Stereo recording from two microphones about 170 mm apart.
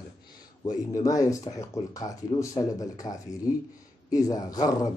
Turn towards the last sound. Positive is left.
turn(degrees=20)  # may be behind; listen again after turning